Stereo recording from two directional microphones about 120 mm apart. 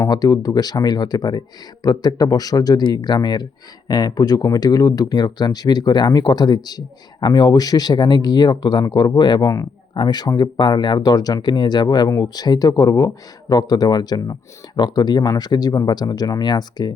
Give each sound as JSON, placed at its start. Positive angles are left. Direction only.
{"t": 0.0, "sound": "speech", "side_deg": 35}